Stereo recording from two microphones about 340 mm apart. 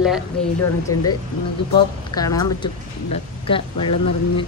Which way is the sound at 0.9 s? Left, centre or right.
Left.